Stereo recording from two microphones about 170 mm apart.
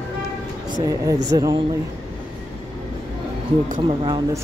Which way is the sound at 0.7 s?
20° right (ahead or behind).